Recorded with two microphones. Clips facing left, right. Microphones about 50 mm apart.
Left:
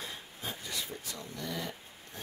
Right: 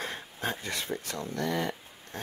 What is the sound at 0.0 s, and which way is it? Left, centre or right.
Speech, right.